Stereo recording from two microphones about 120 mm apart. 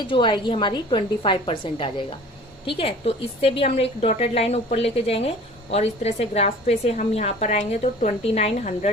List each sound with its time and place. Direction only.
0.1 s a woman's voice: 40° left (ahead or behind)